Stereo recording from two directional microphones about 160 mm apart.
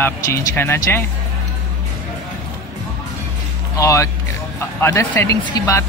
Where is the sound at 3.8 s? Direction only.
20° left (ahead or behind).